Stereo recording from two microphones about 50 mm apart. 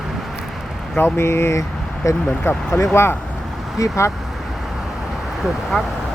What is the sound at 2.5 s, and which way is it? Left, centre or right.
Speech, left.